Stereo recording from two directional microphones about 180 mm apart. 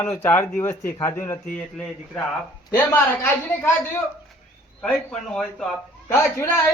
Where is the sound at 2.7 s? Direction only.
15° left (ahead or behind).